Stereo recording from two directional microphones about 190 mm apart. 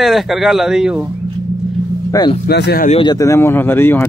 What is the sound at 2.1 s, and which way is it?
Speech, 20° left (ahead or behind).